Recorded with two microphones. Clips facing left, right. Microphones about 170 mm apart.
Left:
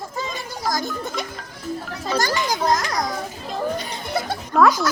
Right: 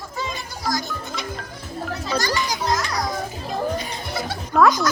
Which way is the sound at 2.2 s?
50° left (ahead or behind).